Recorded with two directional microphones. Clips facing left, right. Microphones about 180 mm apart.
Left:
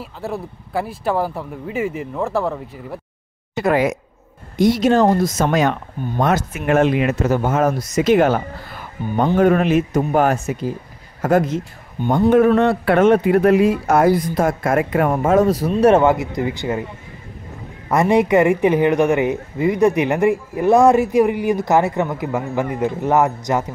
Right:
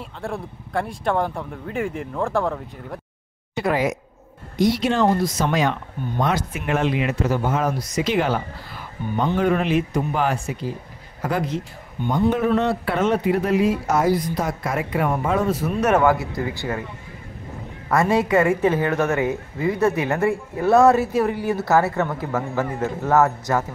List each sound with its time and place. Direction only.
0.0 s speech: 5° left (ahead or behind)
3.5 s speech: 55° left (ahead or behind); by 16.8 s 20° left (ahead or behind)
17.8 s a woman's voice: 20° left (ahead or behind)